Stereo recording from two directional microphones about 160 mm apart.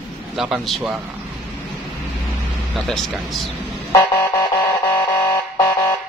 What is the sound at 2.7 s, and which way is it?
Speech, centre (ahead or behind).